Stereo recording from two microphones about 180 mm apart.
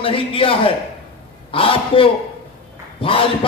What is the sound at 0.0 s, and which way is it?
A man's voice, 30° left (ahead or behind).